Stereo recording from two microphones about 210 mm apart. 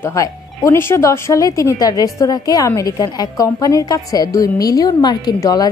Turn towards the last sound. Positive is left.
turn(degrees=20)  # may be behind; listen again after turning